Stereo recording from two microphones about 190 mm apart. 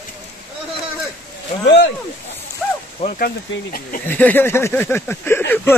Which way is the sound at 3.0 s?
30° left (ahead or behind).